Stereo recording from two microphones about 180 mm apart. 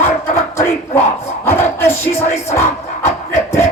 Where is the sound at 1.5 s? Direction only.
15° left (ahead or behind).